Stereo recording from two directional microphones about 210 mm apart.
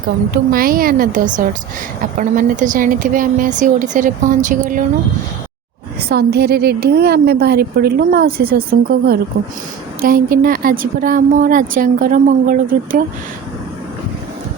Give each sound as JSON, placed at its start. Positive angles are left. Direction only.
{"t": 0.3, "sound": "a woman's voice", "side_deg": -45}
{"t": 6.0, "sound": "a woman's voice", "side_deg": -50}